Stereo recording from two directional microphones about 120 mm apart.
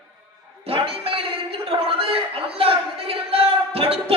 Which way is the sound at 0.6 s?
50° right (ahead or behind).